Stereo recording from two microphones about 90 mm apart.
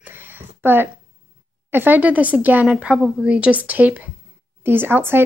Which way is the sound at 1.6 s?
20° right (ahead or behind).